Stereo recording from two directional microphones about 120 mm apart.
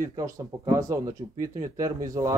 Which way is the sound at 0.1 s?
25° right (ahead or behind).